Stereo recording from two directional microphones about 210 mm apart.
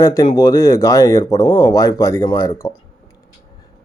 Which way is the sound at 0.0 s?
15° left (ahead or behind).